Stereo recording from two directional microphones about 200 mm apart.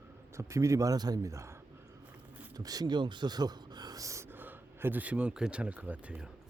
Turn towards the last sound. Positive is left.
turn(degrees=-5)  # may be behind; listen again after turning